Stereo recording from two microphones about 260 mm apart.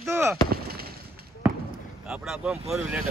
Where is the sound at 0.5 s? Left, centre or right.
Right.